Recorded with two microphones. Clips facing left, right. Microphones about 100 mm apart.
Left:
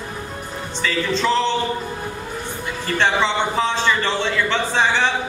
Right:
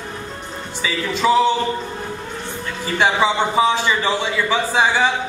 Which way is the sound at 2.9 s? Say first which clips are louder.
Right 2 dB; 10° right (ahead or behind).